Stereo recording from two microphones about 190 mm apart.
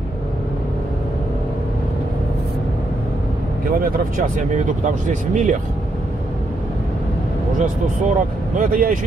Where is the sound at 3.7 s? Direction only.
45° right (ahead or behind).